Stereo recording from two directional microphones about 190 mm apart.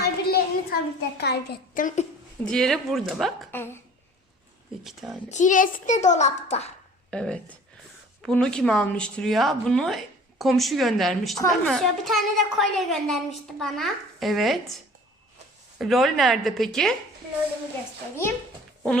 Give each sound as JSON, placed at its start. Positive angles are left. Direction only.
{"t": 0.0, "sound": "a sound", "side_deg": 55}
{"t": 1.2, "sound": "a child's voice", "side_deg": 60}
{"t": 2.4, "sound": "a woman's voice", "side_deg": 5}
{"t": 3.5, "sound": "a woman's voice", "side_deg": 10}
{"t": 4.8, "sound": "a woman's voice", "side_deg": 0}
{"t": 5.3, "sound": "a child's voice", "side_deg": 40}
{"t": 7.1, "sound": "a woman's voice", "side_deg": 5}
{"t": 15.8, "sound": "a woman's voice", "side_deg": 0}